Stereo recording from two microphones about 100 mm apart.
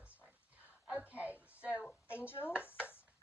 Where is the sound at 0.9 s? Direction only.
15° right (ahead or behind).